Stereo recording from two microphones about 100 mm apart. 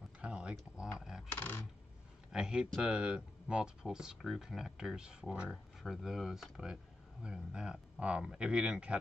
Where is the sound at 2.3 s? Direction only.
10° right (ahead or behind).